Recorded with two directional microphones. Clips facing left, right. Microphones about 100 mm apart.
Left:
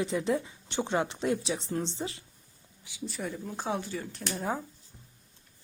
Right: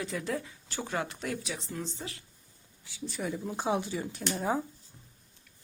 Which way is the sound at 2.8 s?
15° left (ahead or behind).